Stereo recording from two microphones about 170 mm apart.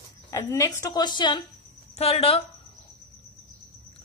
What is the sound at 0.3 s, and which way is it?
A woman's voice, 15° left (ahead or behind).